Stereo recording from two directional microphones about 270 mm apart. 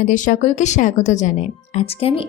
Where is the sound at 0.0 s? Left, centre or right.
Left.